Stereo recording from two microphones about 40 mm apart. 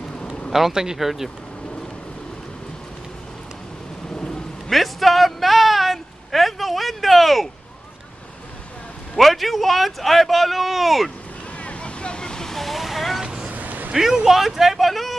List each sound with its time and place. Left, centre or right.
0.5 s speech: centre
4.1 s quack: left
4.6 s a sound: centre
9.1 s a man's voice: centre
11.6 s waves: left
12.5 s vehicle: centre
13.2 s vehicle: centre
13.5 s vehicle: right
13.9 s speech: centre